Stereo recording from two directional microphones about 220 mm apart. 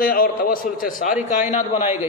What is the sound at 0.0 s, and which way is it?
A man's voice, 40° left (ahead or behind).